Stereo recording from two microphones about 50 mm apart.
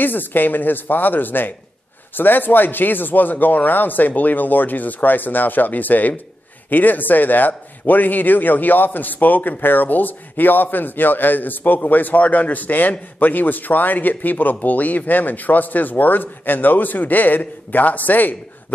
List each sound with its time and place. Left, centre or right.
0.0 s speech: left